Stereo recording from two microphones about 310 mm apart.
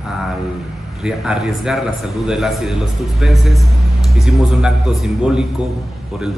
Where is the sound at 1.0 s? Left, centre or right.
Centre.